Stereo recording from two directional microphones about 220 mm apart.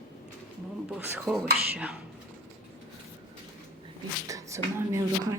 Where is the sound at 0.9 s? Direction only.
5° right (ahead or behind).